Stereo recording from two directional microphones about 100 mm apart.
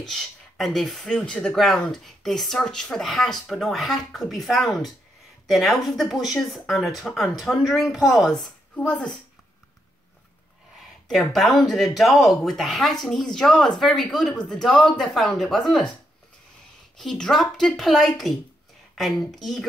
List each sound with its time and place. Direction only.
0.0 s speech: centre (ahead or behind)
11.1 s speech: centre (ahead or behind)
16.9 s speech: 5° left (ahead or behind)